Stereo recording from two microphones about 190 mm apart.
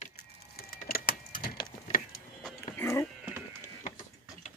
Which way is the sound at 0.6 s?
50° left (ahead or behind).